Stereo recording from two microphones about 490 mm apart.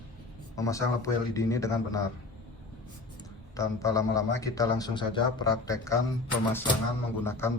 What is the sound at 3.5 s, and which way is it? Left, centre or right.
A man's voice, centre.